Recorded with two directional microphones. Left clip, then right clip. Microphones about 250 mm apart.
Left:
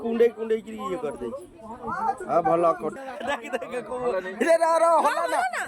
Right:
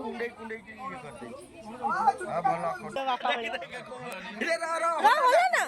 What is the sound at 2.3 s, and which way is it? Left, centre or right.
A man's voice, left.